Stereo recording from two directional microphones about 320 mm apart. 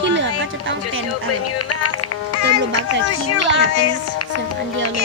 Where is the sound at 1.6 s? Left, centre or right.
Left.